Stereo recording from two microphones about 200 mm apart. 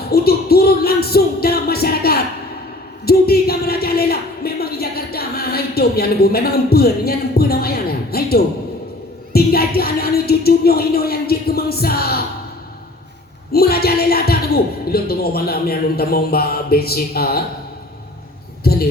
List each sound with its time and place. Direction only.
0.1 s speech: 50° left (ahead or behind)
13.5 s speech: 50° left (ahead or behind)
18.6 s a sound: 50° left (ahead or behind)